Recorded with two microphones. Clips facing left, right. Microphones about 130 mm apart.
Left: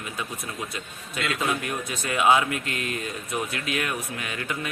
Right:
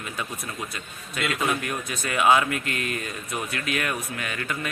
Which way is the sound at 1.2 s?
20° left (ahead or behind).